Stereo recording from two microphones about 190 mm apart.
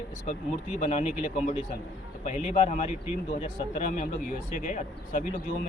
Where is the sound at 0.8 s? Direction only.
35° left (ahead or behind).